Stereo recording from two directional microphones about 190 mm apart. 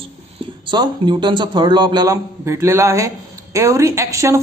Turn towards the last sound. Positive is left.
turn(degrees=-15)  # may be behind; listen again after turning